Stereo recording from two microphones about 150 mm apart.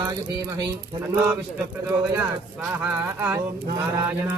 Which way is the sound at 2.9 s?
10° right (ahead or behind).